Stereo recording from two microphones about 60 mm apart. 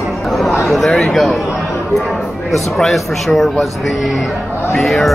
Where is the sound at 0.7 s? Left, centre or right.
Centre.